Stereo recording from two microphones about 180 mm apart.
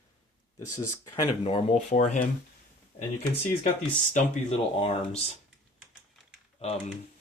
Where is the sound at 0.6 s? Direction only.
15° left (ahead or behind).